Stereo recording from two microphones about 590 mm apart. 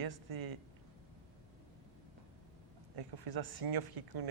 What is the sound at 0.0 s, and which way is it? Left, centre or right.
Speech, right.